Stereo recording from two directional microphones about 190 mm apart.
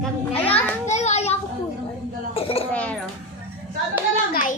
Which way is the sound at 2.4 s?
30° left (ahead or behind).